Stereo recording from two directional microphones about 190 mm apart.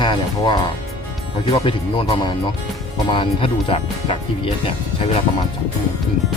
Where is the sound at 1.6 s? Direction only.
25° left (ahead or behind).